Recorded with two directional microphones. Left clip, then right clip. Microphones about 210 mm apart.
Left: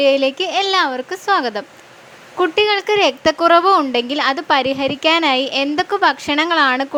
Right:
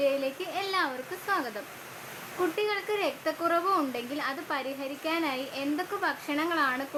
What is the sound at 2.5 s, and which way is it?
A woman's voice, 40° left (ahead or behind).